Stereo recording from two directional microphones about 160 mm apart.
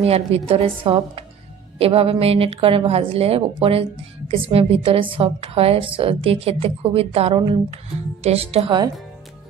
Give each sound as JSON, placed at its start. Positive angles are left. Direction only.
{"t": 0.0, "sound": "a woman's voice", "side_deg": -40}